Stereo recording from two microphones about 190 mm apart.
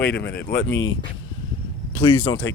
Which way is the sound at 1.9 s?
20° left (ahead or behind).